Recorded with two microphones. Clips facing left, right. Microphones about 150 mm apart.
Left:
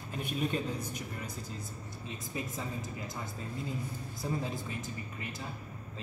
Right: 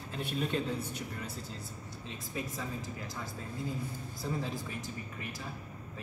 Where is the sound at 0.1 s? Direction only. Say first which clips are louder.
Even; 10° left (ahead or behind).